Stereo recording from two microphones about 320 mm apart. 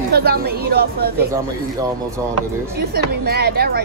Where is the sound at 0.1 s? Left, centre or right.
Right.